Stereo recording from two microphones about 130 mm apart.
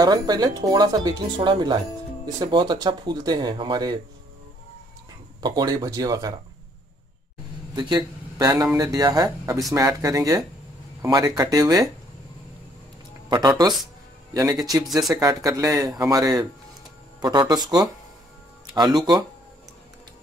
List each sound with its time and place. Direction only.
0.0 s speech: 30° right (ahead or behind)
5.4 s speech: 30° right (ahead or behind)
7.7 s speech: 30° right (ahead or behind)
13.3 s speech: 35° right (ahead or behind)
14.9 s speech: centre (ahead or behind)
15.1 s speech: 25° right (ahead or behind)